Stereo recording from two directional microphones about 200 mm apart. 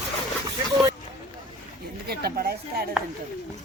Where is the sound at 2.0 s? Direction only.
55° right (ahead or behind).